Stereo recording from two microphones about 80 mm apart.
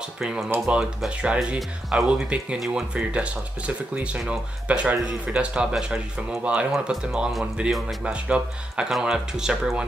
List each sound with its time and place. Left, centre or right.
0.2 s speech: centre
6.7 s speech: centre